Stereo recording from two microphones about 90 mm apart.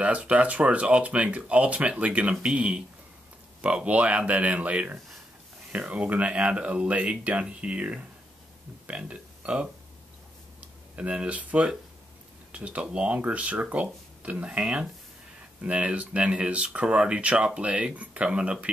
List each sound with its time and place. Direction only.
0.0 s speech: 15° right (ahead or behind)
11.0 s speech: 15° right (ahead or behind)